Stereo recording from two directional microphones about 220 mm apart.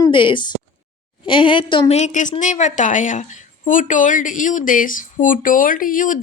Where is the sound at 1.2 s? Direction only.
20° left (ahead or behind).